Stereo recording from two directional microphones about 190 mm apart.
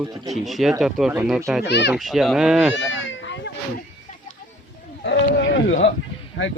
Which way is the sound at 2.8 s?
75° left (ahead or behind).